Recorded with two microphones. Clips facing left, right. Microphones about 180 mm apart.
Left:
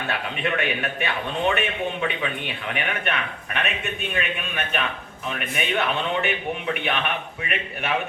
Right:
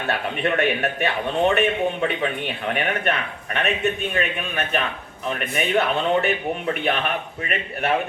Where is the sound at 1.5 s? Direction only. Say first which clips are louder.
Right 4 dB; 40° right (ahead or behind).